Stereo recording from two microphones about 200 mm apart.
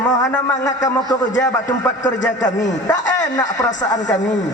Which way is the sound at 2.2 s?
40° left (ahead or behind).